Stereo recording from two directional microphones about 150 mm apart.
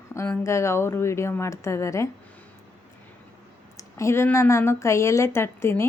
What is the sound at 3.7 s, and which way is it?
A woman's voice, 20° left (ahead or behind).